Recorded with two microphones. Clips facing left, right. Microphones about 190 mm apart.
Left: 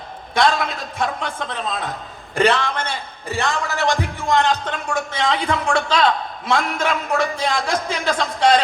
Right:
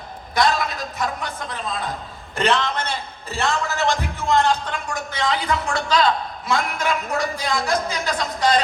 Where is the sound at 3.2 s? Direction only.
15° left (ahead or behind).